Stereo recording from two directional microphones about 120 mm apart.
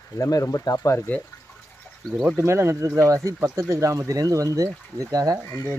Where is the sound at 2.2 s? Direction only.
20° right (ahead or behind).